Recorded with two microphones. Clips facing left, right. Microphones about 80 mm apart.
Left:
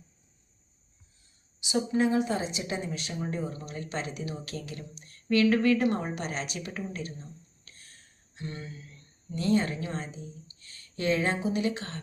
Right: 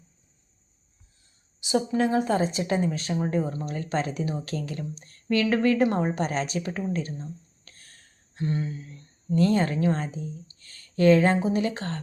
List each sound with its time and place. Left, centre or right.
1.6 s a woman's voice: right
9.3 s a woman's voice: right